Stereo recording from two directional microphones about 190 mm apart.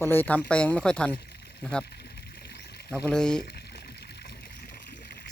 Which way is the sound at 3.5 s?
60° left (ahead or behind).